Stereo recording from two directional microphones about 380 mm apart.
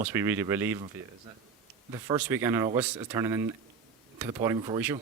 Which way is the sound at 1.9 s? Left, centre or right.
Centre.